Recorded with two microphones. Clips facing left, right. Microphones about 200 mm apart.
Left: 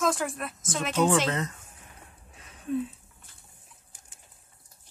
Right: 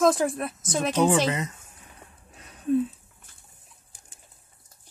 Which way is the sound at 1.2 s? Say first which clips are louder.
Right 2 dB; 10° right (ahead or behind).